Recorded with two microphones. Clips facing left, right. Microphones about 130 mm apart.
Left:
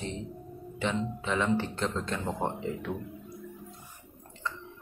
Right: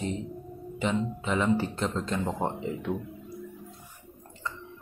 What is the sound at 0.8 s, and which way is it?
Speech, 5° right (ahead or behind).